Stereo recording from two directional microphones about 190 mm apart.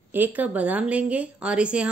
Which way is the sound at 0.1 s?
10° right (ahead or behind).